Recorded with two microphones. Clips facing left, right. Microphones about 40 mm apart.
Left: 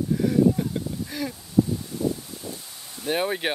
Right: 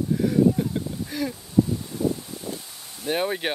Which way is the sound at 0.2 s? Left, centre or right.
Centre.